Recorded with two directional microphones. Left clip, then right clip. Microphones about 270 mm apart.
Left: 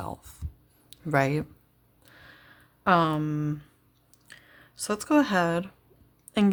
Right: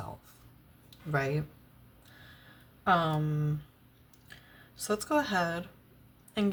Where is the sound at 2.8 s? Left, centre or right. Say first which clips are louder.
Left 5 dB; left.